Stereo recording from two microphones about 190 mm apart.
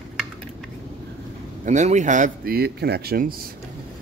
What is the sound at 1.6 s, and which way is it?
Speech, 40° right (ahead or behind).